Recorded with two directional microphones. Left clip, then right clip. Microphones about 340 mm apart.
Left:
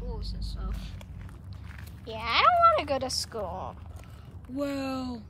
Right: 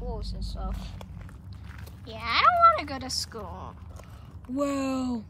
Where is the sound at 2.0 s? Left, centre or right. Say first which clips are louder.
Right 1 dB; centre.